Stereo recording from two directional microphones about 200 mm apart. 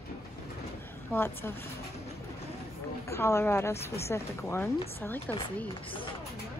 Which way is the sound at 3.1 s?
15° left (ahead or behind).